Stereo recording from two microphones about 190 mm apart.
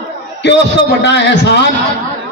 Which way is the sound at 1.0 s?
65° left (ahead or behind).